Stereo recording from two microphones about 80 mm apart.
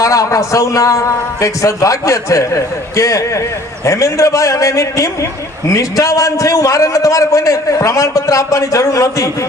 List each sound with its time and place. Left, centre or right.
0.0 s a man's voice: left